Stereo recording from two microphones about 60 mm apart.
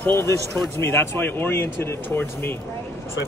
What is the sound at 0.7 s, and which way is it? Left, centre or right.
Speech, left.